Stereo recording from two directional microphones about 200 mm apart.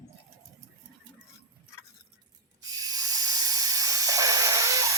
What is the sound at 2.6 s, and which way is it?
Hiss, 20° right (ahead or behind).